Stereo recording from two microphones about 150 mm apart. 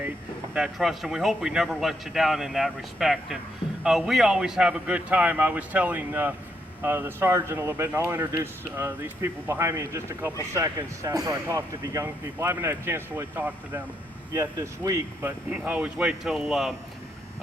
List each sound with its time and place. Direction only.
0.5 s a man's voice: 5° right (ahead or behind)